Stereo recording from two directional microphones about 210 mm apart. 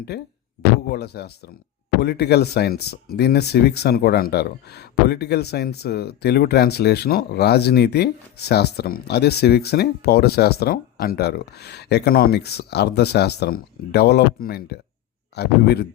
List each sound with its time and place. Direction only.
0.1 s speech: 50° left (ahead or behind)